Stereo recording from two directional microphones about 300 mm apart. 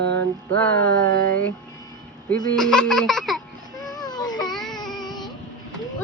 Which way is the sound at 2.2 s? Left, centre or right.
Centre.